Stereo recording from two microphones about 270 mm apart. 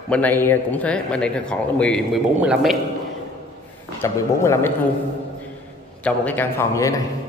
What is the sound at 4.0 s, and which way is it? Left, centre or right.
Speech, centre.